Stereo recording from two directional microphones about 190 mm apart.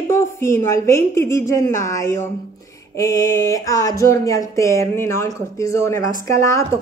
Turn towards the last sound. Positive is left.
turn(degrees=15)  # may be behind; listen again after turning